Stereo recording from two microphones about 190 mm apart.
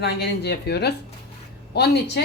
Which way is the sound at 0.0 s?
60° left (ahead or behind).